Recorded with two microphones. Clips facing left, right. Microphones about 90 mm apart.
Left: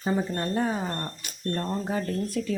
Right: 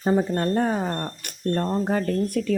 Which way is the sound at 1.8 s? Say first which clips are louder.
Right 5 dB; 55° right (ahead or behind).